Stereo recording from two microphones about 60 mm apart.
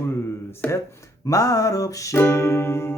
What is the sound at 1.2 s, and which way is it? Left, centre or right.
Music, left.